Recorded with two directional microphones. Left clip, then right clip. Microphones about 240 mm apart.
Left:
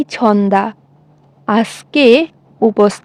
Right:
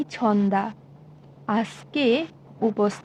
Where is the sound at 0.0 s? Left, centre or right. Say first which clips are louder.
Left 10 dB; left.